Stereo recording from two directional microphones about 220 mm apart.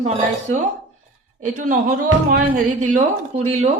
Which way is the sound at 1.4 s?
35° right (ahead or behind).